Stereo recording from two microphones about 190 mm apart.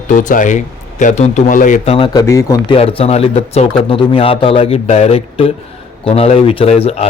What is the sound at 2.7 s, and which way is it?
A man's voice, 30° left (ahead or behind).